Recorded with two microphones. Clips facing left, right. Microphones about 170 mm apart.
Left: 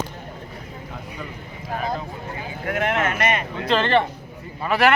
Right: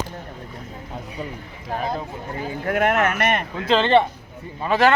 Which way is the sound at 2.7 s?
45° right (ahead or behind).